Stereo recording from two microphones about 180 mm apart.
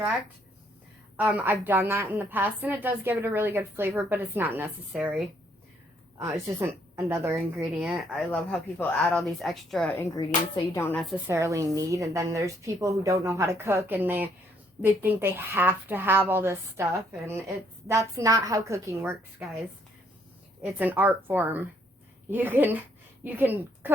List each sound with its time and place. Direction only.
1.1 s a woman's voice: 10° right (ahead or behind)
6.1 s a woman's voice: 15° right (ahead or behind)
7.6 s speech: centre (ahead or behind)
9.9 s speech: 20° left (ahead or behind)
10.9 s speech: centre (ahead or behind)
11.3 s a woman's voice: 15° right (ahead or behind)
20.6 s a woman's voice: 10° right (ahead or behind)